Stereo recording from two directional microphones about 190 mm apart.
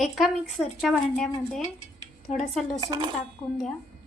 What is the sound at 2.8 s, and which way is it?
Dishes, 20° right (ahead or behind).